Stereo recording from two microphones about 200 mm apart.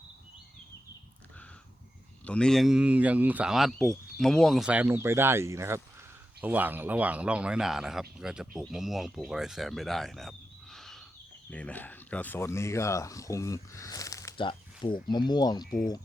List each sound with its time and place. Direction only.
2.2 s speech: 5° left (ahead or behind); by 15.6 s 20° left (ahead or behind)
15.6 s speech: 45° left (ahead or behind)